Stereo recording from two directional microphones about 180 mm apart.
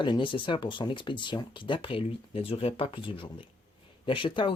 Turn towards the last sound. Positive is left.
turn(degrees=30)  # may be behind; listen again after turning